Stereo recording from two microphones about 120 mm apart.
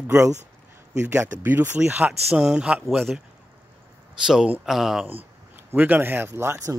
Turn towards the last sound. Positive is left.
turn(degrees=-25)  # may be behind; listen again after turning